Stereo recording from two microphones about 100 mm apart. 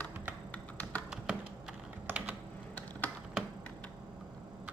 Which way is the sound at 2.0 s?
20° right (ahead or behind).